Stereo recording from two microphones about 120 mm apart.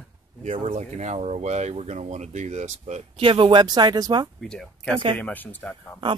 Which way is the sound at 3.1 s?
45° right (ahead or behind).